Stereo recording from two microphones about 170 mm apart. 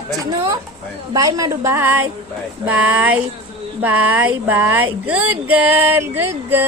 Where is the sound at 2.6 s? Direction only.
10° right (ahead or behind).